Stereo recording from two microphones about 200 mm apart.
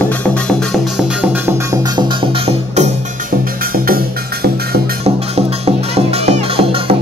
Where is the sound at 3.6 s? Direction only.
45° right (ahead or behind).